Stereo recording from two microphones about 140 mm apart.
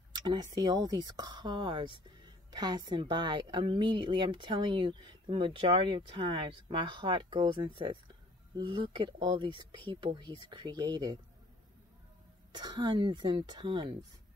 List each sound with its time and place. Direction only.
0.1 s speech: 30° right (ahead or behind)
12.5 s speech: 30° right (ahead or behind)